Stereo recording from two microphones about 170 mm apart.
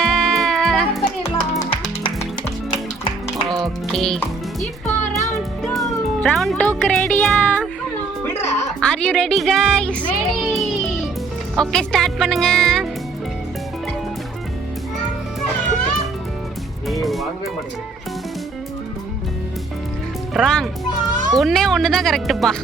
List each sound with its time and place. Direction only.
0.0 s music: 5° left (ahead or behind)
1.5 s music: 25° left (ahead or behind)
3.9 s a child's voice: 5° left (ahead or behind)
4.9 s music: 20° left (ahead or behind)
5.6 s music: centre (ahead or behind)
8.8 s a child's voice: 5° left (ahead or behind)
16.9 s music: centre (ahead or behind)
20.3 s a child's voice: centre (ahead or behind)